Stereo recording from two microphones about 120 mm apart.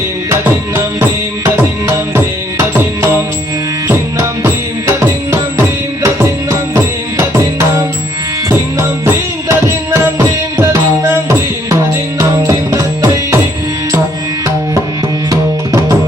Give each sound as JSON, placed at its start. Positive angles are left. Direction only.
{"t": 1.5, "sound": "music", "side_deg": -20}
{"t": 15.3, "sound": "tabla", "side_deg": -25}